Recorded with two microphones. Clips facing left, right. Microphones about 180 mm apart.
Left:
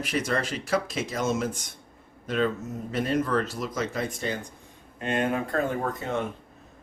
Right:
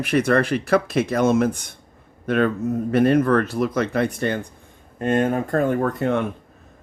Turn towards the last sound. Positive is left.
turn(degrees=-65)  # may be behind; listen again after turning